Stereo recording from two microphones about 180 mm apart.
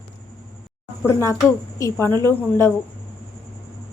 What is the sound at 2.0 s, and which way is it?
Speech, 20° right (ahead or behind).